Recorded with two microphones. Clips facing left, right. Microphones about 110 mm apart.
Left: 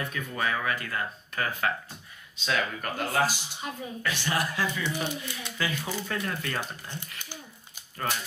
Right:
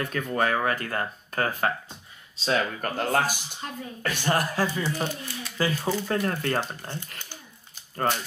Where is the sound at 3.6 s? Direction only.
5° left (ahead or behind).